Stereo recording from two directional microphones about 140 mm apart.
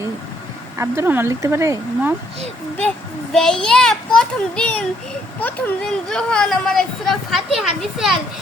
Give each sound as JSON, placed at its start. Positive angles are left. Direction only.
{"t": 0.8, "sound": "speech", "side_deg": -15}
{"t": 3.3, "sound": "speech", "side_deg": 5}